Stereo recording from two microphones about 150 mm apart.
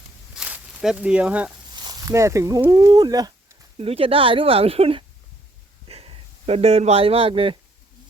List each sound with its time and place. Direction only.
0.3 s a sound: 5° right (ahead or behind)
1.7 s speech: 25° right (ahead or behind)
3.8 s speech: 40° right (ahead or behind)